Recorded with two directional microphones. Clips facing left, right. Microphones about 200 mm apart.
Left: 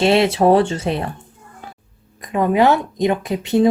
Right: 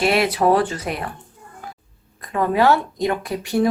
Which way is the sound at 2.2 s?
20° left (ahead or behind).